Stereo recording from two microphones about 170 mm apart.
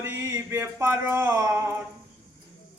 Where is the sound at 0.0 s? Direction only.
15° right (ahead or behind).